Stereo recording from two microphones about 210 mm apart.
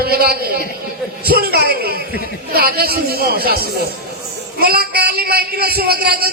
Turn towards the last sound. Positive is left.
turn(degrees=-45)  # may be behind; listen again after turning